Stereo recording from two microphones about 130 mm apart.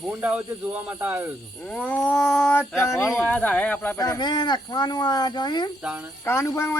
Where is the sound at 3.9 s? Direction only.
30° left (ahead or behind).